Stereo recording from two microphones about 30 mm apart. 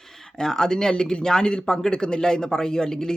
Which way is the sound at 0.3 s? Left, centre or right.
Left.